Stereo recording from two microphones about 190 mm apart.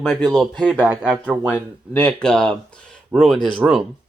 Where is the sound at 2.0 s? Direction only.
5° left (ahead or behind).